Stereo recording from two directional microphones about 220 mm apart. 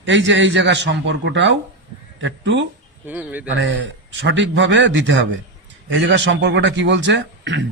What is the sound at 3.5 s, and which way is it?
A man's voice, 60° right (ahead or behind).